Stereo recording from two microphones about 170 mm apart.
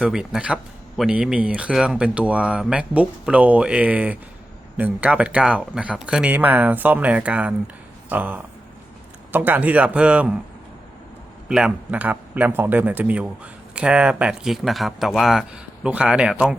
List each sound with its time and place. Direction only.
0.0 s a man's voice: 5° right (ahead or behind)
11.4 s a man's voice: 5° right (ahead or behind)